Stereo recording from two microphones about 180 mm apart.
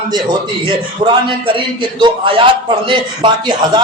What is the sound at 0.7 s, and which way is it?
A man's voice, 30° right (ahead or behind).